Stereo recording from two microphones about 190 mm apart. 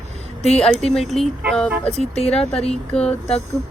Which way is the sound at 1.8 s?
35° left (ahead or behind).